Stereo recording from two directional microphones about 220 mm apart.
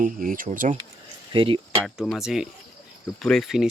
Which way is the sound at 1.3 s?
25° right (ahead or behind).